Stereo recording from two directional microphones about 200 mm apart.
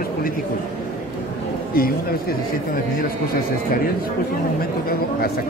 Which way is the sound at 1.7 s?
45° left (ahead or behind).